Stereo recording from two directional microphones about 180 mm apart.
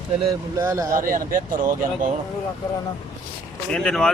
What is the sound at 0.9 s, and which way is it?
Speech, 50° right (ahead or behind).